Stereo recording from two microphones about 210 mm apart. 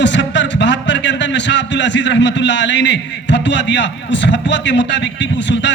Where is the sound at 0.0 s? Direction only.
55° left (ahead or behind).